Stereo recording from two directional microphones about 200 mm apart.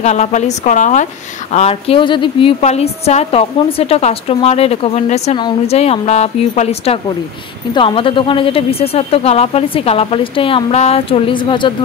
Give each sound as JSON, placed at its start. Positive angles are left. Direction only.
{"t": 0.0, "sound": "speech", "side_deg": 35}